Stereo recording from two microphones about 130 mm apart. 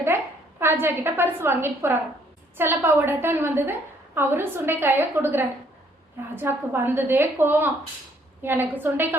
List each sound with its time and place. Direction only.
0.6 s a woman's voice: 15° right (ahead or behind)